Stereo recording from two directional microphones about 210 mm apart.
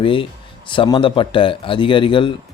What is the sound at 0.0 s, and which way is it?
Speech, 25° left (ahead or behind).